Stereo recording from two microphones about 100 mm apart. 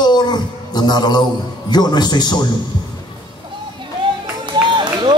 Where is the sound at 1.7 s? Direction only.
45° left (ahead or behind).